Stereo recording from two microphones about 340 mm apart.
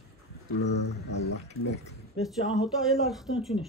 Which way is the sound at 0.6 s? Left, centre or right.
Left.